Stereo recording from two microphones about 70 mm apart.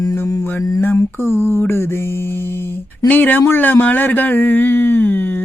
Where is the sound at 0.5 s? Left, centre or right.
Left.